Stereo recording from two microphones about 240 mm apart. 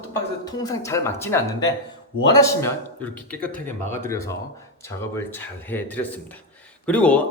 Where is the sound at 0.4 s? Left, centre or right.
Centre.